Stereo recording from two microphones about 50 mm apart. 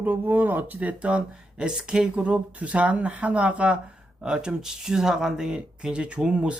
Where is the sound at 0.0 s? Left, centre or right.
Right.